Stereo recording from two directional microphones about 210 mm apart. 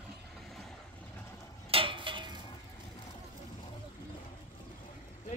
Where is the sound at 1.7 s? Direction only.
25° right (ahead or behind).